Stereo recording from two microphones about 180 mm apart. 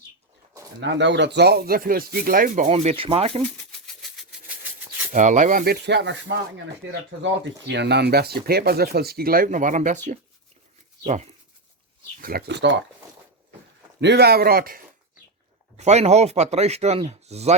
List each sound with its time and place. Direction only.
0.8 s speech: 85° right; by 3.4 s 30° right (ahead or behind)
3.7 s maraca: centre (ahead or behind)
5.1 s speech: 45° right (ahead or behind)
5.8 s speech: 75° right (ahead or behind)
6.8 s speech: 85° right
7.7 s speech: 70° right (ahead or behind); by 10.0 s 45° right (ahead or behind)
11.0 s speech: 40° right (ahead or behind)
12.2 s speech: 60° right (ahead or behind); by 12.8 s 80° right
14.0 s speech: 65° right (ahead or behind)
15.8 s speech: 35° right (ahead or behind)